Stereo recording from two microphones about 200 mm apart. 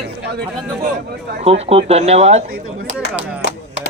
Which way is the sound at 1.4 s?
30° right (ahead or behind).